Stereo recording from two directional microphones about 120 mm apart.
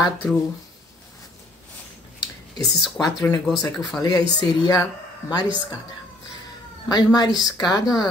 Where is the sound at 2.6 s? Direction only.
35° left (ahead or behind).